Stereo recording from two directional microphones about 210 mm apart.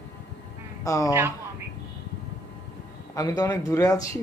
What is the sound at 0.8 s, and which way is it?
Speech, 15° left (ahead or behind).